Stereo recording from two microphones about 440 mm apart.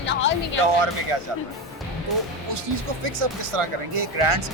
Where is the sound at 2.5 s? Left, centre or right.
Right.